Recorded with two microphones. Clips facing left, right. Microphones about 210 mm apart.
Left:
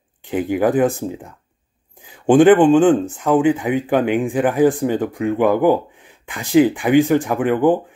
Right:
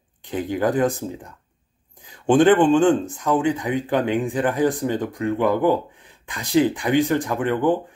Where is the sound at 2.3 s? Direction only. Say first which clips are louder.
Left 4 dB; 15° left (ahead or behind).